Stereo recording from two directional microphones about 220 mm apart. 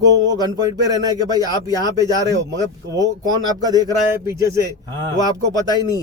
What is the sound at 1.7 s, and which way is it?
Speech, 15° left (ahead or behind).